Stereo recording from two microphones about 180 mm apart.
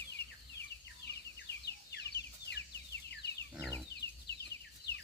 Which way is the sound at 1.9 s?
70° left (ahead or behind).